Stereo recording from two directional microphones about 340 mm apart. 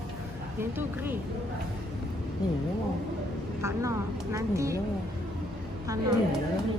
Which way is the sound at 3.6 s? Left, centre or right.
Centre.